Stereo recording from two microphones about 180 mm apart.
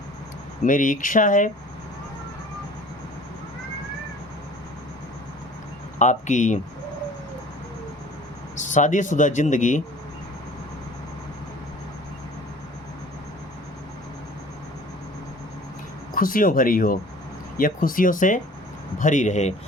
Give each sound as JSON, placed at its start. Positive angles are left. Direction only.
{"t": 0.6, "sound": "speech", "side_deg": 45}
{"t": 6.0, "sound": "speech", "side_deg": 45}
{"t": 8.5, "sound": "speech", "side_deg": 45}
{"t": 16.1, "sound": "speech", "side_deg": 50}